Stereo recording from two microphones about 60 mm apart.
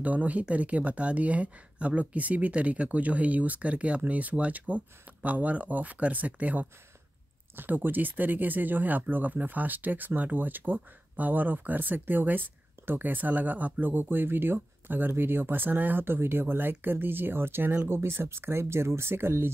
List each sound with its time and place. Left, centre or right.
0.0 s speech: right